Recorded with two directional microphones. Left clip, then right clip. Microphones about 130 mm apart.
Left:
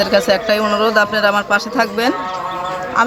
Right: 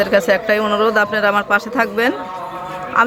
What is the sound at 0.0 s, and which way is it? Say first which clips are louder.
Speech: even; 15° right (ahead or behind).